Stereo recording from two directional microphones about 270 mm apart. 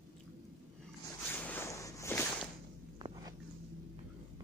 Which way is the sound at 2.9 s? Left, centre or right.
Centre.